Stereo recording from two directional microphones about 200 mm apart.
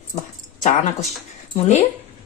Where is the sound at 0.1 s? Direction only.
35° left (ahead or behind).